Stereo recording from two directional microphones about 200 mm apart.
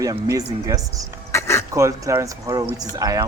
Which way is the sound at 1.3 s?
15° left (ahead or behind).